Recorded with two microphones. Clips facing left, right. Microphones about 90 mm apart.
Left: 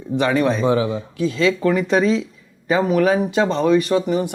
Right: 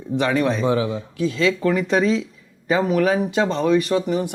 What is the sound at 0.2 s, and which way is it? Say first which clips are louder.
A man's voice: left 2 dB; 20° left (ahead or behind).